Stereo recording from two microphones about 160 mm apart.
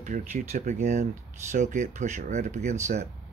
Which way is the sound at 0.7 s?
45° right (ahead or behind).